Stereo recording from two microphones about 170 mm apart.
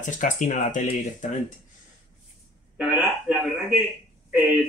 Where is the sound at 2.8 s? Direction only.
10° right (ahead or behind).